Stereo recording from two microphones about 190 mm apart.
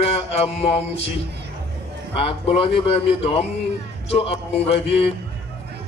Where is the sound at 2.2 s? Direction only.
30° left (ahead or behind).